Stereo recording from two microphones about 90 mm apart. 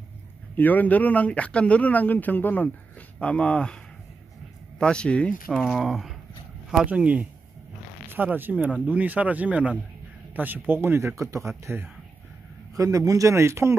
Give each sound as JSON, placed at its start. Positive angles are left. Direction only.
{"t": 0.6, "sound": "speech", "side_deg": 20}
{"t": 4.7, "sound": "speech", "side_deg": 10}
{"t": 11.6, "sound": "speech", "side_deg": -25}
{"t": 12.7, "sound": "speech", "side_deg": -40}